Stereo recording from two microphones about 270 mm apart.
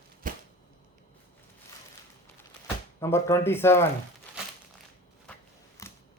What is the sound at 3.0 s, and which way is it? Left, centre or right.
Speech, centre.